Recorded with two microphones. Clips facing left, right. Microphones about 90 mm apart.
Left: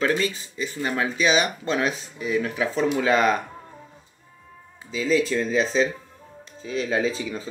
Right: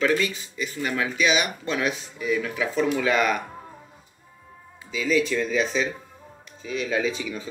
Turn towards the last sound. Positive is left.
turn(degrees=35)  # may be behind; listen again after turning